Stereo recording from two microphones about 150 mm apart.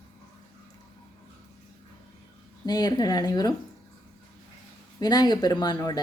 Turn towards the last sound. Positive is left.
turn(degrees=30)  # may be behind; listen again after turning